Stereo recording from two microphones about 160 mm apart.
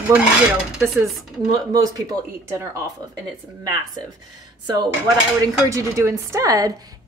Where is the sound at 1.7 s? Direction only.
20° right (ahead or behind).